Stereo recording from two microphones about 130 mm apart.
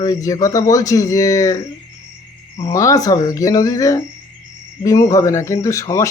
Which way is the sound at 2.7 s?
25° left (ahead or behind).